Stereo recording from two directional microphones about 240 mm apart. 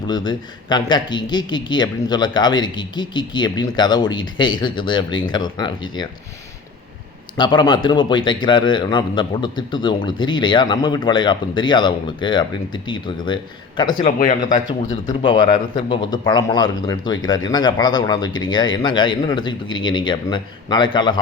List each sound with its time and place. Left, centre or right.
0.1 s speech: centre
7.3 s a man's voice: centre
14.0 s speech: left
15.0 s a man's voice: centre